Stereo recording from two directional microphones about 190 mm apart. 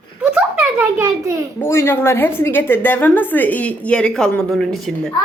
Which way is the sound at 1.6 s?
15° left (ahead or behind).